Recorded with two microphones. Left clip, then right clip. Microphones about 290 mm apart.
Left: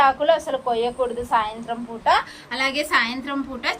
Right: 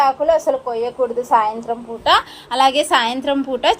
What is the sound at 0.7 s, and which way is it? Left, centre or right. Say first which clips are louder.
Speech: right 3 dB; right.